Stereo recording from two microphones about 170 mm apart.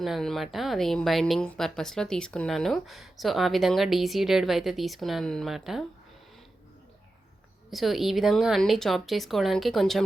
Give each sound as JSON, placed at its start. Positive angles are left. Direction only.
{"t": 0.0, "sound": "speech", "side_deg": 0}
{"t": 7.7, "sound": "speech", "side_deg": 0}